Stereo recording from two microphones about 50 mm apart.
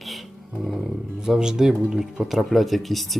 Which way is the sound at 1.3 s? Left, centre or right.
Centre.